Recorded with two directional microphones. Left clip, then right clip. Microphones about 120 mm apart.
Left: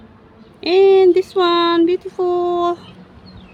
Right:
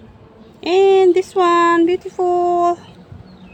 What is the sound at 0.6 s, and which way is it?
Speech, 15° left (ahead or behind).